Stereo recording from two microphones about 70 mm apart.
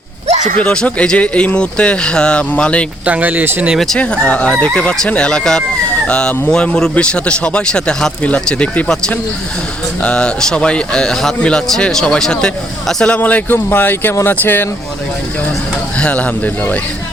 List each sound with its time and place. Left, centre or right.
0.6 s speech: centre
3.1 s speech: right
3.9 s speech: centre
13.1 s speech: left
16.0 s speech: centre